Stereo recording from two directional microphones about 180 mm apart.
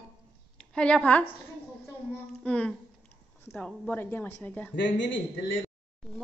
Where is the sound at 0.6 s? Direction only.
5° left (ahead or behind).